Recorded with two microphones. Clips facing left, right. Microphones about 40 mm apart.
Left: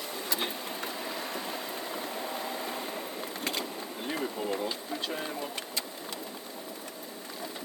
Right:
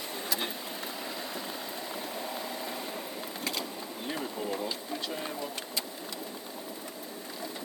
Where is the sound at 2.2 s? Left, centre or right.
Centre.